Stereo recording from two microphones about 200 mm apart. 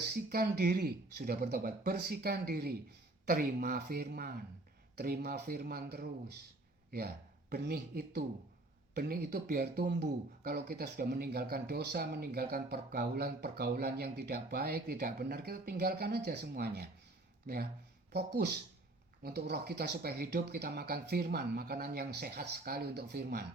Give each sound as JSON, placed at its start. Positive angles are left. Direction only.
{"t": 0.1, "sound": "speech", "side_deg": -50}
{"t": 7.5, "sound": "speech", "side_deg": -50}